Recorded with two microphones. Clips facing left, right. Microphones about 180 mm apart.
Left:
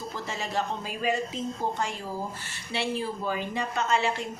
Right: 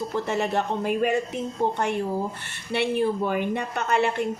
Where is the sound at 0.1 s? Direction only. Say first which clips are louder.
Right 7 dB; 60° right (ahead or behind).